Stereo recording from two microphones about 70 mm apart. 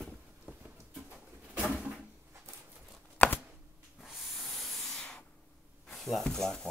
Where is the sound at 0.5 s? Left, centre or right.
Centre.